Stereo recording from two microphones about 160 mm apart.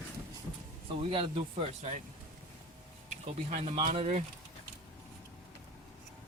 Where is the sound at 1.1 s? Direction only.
40° right (ahead or behind).